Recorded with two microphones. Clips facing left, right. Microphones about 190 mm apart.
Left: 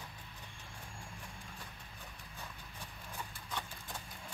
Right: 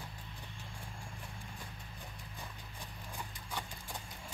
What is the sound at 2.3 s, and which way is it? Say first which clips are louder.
Horse: left 1 dB; 15° right (ahead or behind).